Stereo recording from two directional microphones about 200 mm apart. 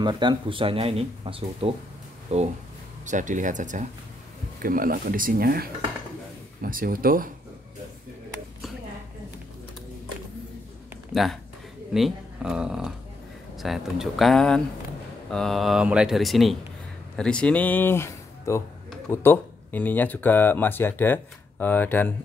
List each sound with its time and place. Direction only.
0.0 s speech: 20° right (ahead or behind); by 7.2 s 45° right (ahead or behind)
11.1 s speech: centre (ahead or behind)